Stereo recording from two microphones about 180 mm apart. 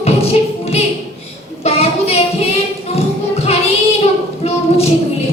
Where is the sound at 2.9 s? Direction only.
35° left (ahead or behind).